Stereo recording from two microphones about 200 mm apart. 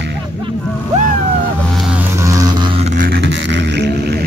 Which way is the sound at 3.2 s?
60° right (ahead or behind).